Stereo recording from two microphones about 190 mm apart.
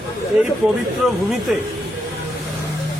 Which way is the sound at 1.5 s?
5° right (ahead or behind).